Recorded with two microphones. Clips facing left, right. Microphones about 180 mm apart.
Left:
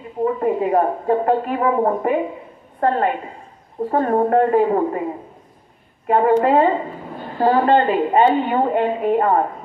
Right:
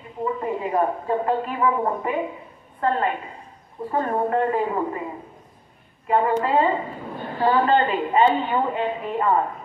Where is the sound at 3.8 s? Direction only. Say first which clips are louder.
Left 6 dB; 45° left (ahead or behind).